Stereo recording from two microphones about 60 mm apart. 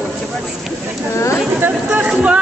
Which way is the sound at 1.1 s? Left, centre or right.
Left.